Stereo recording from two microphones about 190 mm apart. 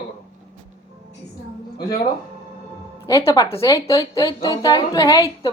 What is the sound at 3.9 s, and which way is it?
A woman's voice, 25° left (ahead or behind).